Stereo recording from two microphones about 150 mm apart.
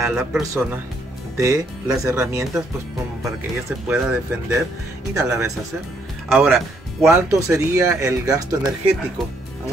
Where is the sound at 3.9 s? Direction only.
15° right (ahead or behind).